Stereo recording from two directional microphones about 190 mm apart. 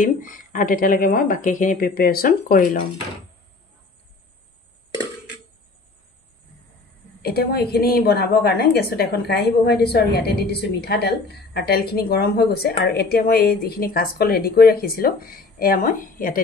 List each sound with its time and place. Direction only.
0.0 s a woman's voice: 45° left (ahead or behind)
7.2 s a woman's voice: 55° left (ahead or behind)